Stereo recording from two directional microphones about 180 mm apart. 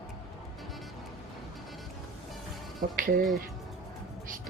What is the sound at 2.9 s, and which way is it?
Music, 50° right (ahead or behind).